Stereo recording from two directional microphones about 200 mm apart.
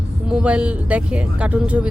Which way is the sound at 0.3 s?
5° right (ahead or behind).